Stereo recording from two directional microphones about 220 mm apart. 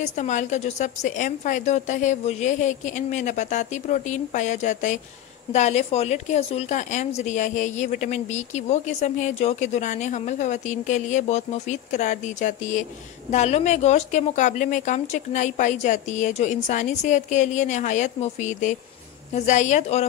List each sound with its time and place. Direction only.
0.0 s speech: 30° left (ahead or behind)